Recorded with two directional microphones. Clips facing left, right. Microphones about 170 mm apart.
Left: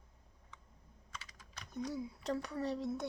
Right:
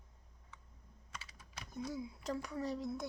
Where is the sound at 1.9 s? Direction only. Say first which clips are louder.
Left 2 dB; 35° left (ahead or behind).